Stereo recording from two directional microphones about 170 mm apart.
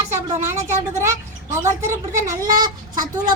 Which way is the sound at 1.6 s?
15° right (ahead or behind).